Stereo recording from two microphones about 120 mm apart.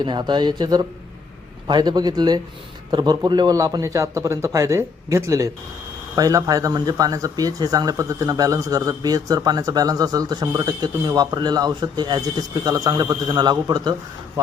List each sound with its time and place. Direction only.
0.0 s a man's voice: 40° right (ahead or behind)